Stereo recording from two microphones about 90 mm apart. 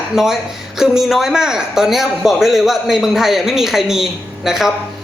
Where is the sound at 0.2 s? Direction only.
5° right (ahead or behind).